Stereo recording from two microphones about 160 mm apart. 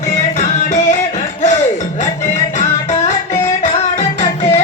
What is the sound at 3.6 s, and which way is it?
Music, 45° left (ahead or behind).